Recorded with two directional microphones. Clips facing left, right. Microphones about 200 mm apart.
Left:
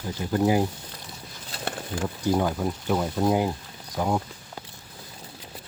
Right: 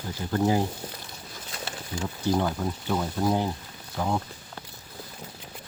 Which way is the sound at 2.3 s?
10° left (ahead or behind).